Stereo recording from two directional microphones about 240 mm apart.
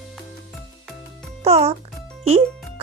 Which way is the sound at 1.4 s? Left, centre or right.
Right.